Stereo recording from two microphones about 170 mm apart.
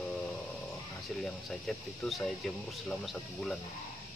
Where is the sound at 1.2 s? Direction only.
5° left (ahead or behind).